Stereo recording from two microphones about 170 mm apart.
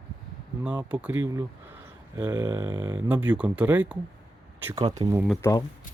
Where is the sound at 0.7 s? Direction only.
5° right (ahead or behind).